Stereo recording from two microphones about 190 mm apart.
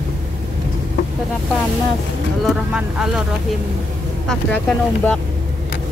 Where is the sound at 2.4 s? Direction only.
5° right (ahead or behind).